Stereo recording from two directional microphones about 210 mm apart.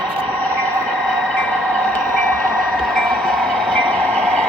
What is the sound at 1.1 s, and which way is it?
Train, 5° left (ahead or behind).